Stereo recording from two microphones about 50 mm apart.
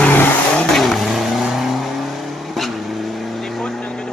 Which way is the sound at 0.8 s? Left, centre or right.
Centre.